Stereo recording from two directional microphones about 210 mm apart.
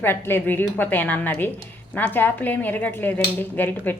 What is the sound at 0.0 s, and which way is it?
A woman's voice, 10° left (ahead or behind).